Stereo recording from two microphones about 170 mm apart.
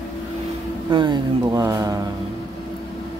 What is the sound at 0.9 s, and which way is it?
Speech, 25° right (ahead or behind).